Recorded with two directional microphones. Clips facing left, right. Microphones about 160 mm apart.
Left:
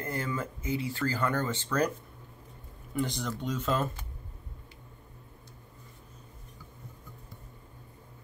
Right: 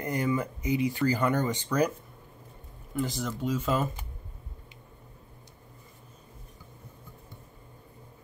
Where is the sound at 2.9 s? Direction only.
Centre (ahead or behind).